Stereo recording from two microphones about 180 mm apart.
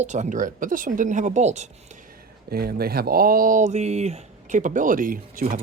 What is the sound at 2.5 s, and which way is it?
Speech, 60° right (ahead or behind).